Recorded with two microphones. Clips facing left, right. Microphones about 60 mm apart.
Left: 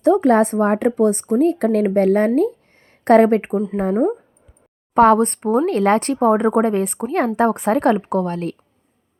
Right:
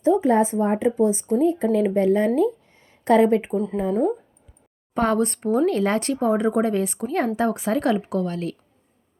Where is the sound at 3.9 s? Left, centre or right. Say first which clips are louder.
Left 3 dB; left.